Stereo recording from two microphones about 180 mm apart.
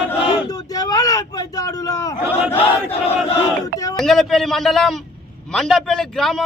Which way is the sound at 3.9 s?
Centre (ahead or behind).